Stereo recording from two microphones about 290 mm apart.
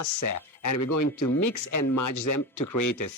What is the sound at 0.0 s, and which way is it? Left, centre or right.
Speech, left.